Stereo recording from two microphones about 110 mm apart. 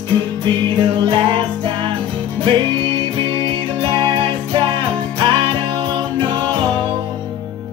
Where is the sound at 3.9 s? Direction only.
50° right (ahead or behind).